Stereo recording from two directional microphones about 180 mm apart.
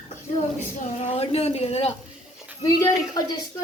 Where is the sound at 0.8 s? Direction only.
40° left (ahead or behind).